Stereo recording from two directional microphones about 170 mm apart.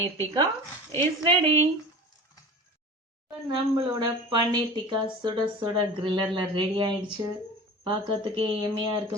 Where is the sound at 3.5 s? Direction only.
30° right (ahead or behind).